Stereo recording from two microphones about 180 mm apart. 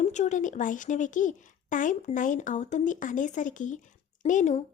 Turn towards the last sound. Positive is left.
turn(degrees=45)  # may be behind; listen again after turning